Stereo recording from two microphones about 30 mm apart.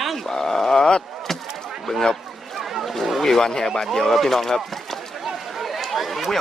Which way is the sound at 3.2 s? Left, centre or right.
Centre.